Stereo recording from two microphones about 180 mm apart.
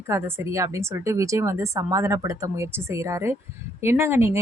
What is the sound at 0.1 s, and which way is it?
Speech, 15° right (ahead or behind).